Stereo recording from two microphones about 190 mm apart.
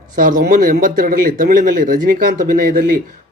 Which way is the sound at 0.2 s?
45° right (ahead or behind).